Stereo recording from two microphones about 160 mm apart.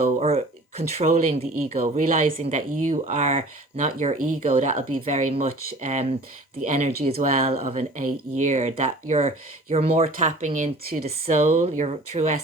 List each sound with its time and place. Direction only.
0.2 s speech: 40° right (ahead or behind); by 2.4 s 60° right (ahead or behind)
2.4 s speech: 45° right (ahead or behind)
7.2 s speech: 60° right (ahead or behind)
7.4 s speech: 40° right (ahead or behind)
8.4 s speech: 50° right (ahead or behind)